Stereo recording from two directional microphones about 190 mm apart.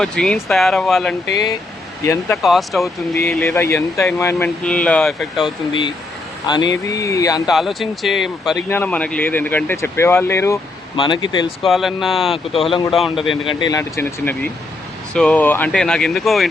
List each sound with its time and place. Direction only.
0.0 s speech: 5° left (ahead or behind)
2.3 s speech: centre (ahead or behind)
3.2 s speech: 15° left (ahead or behind)
6.5 s speech: 20° left (ahead or behind)
7.5 s speech: centre (ahead or behind)
10.9 s speech: 25° left (ahead or behind)
11.6 s speech: centre (ahead or behind)
12.3 s speech: 30° left (ahead or behind)
12.9 s speech: centre (ahead or behind)
13.4 s speech: 25° left (ahead or behind); by 16.5 s centre (ahead or behind)